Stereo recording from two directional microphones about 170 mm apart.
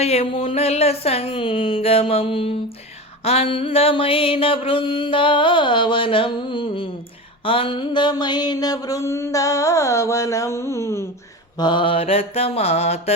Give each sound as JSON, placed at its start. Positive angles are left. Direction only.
{"t": 0.0, "sound": "mantra", "side_deg": 35}
{"t": 7.4, "sound": "a sound", "side_deg": 30}
{"t": 11.5, "sound": "mantra", "side_deg": 25}